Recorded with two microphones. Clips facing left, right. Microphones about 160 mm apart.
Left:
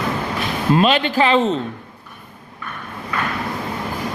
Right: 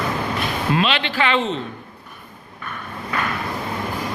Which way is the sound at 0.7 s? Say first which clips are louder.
Left 7 dB; 45° left (ahead or behind).